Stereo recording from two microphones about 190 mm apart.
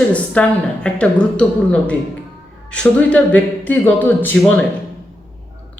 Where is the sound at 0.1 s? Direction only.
5° left (ahead or behind).